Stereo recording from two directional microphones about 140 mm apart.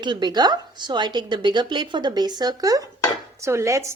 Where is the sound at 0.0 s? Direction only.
30° right (ahead or behind).